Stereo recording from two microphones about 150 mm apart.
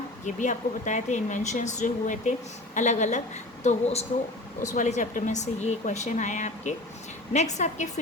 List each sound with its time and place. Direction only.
0.3 s speech: 55° left (ahead or behind)